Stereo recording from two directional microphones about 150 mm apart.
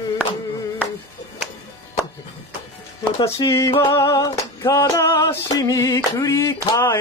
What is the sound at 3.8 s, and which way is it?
Female singing, 20° left (ahead or behind).